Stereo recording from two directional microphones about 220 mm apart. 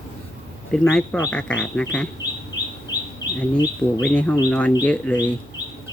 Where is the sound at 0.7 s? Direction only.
5° left (ahead or behind).